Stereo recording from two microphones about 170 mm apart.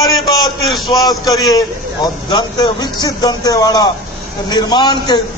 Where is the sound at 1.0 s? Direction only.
20° left (ahead or behind).